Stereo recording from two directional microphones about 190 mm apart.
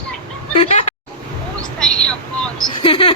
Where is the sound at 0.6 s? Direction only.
35° left (ahead or behind).